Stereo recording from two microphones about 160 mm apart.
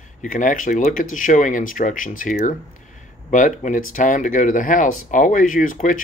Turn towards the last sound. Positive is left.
turn(degrees=55)  # may be behind; listen again after turning